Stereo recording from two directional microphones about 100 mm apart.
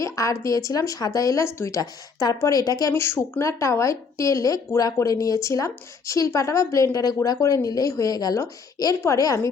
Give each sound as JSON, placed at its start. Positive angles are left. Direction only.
{"t": 0.0, "sound": "speech", "side_deg": 30}
{"t": 3.0, "sound": "speech", "side_deg": 25}